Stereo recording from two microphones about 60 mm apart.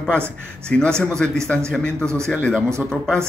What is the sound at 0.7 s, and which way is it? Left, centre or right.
A man's voice, centre.